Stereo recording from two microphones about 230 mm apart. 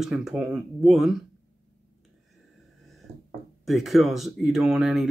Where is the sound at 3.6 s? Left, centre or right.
Centre.